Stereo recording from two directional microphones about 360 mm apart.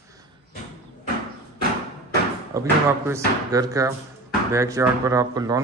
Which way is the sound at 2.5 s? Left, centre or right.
Centre.